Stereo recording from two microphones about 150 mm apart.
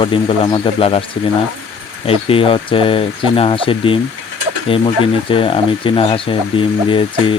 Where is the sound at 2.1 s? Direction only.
40° left (ahead or behind).